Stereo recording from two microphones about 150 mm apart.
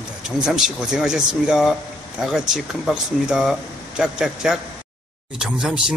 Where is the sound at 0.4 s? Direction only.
5° right (ahead or behind).